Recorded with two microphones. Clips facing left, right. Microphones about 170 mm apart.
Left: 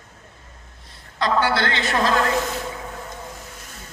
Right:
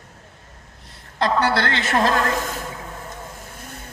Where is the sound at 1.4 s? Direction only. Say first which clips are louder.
Right 1 dB; 45° right (ahead or behind).